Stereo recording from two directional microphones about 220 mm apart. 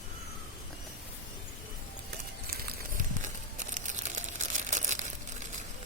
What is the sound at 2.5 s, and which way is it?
Crumpling, 35° right (ahead or behind).